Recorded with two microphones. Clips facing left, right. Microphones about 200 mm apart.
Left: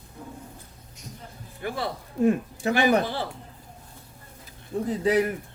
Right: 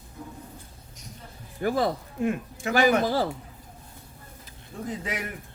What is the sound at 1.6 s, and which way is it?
Speech, 40° right (ahead or behind).